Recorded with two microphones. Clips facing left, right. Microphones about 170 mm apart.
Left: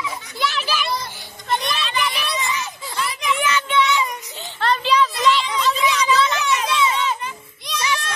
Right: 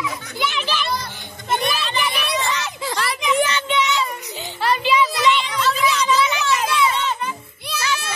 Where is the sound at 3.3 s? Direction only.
35° right (ahead or behind).